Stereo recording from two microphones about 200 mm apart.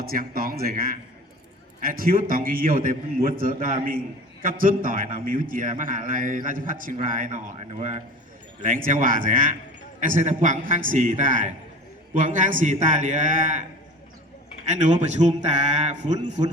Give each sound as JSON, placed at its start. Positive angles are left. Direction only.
{"t": 0.0, "sound": "a man's voice", "side_deg": -45}
{"t": 14.7, "sound": "a man's voice", "side_deg": -35}